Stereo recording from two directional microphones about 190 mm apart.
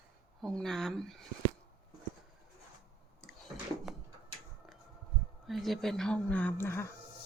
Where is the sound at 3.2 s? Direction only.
Centre (ahead or behind).